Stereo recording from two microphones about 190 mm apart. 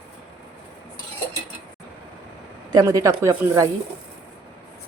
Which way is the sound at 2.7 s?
20° right (ahead or behind).